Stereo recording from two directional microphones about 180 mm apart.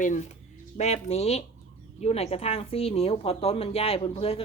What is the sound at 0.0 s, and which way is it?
A woman's voice, 45° left (ahead or behind).